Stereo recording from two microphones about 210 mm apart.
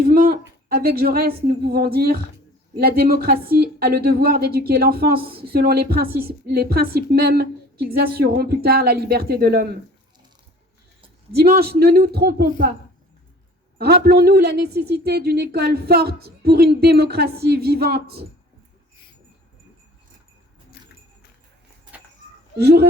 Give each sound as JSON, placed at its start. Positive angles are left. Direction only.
{"t": 0.0, "sound": "a woman's voice", "side_deg": -45}
{"t": 11.3, "sound": "a woman's voice", "side_deg": -50}
{"t": 13.7, "sound": "a woman's voice", "side_deg": -50}
{"t": 22.5, "sound": "a woman's voice", "side_deg": -50}